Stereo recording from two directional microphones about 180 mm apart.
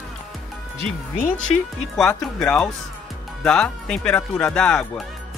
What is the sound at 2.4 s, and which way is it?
Speech, 5° left (ahead or behind).